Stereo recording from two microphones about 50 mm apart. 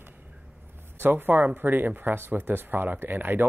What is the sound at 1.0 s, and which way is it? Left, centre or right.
Speech, right.